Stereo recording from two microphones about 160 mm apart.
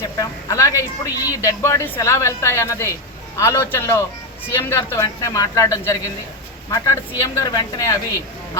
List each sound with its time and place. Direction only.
0.2 s a woman's voice: 20° left (ahead or behind)